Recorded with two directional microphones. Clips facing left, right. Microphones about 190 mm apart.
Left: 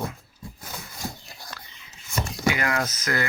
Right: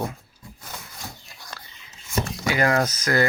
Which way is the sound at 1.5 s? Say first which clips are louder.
Right 4 dB; 35° right (ahead or behind).